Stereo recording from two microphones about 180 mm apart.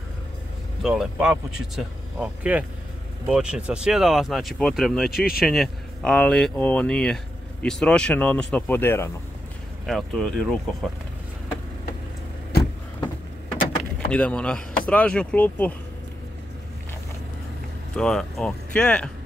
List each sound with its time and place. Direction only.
0.8 s speech: 5° right (ahead or behind); by 9.1 s 10° left (ahead or behind)
9.8 s speech: centre (ahead or behind)
13.9 s speech: 5° left (ahead or behind)
17.9 s speech: 5° left (ahead or behind)